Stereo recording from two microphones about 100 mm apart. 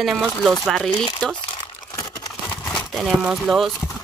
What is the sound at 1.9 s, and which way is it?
Crumpling, 40° left (ahead or behind).